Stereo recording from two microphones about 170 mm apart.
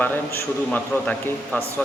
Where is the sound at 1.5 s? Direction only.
10° left (ahead or behind).